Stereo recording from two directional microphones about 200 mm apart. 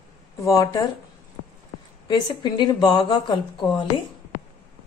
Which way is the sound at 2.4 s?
20° left (ahead or behind).